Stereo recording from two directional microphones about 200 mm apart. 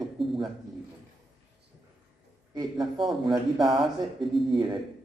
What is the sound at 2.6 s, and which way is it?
Speech, 25° right (ahead or behind).